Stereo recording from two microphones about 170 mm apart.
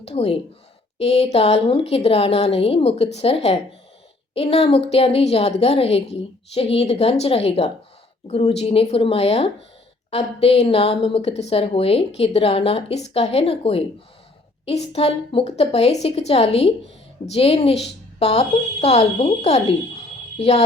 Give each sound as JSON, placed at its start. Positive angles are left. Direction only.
{"t": 0.0, "sound": "a woman's voice", "side_deg": 35}